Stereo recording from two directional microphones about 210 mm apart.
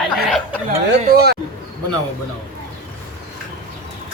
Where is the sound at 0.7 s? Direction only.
50° right (ahead or behind).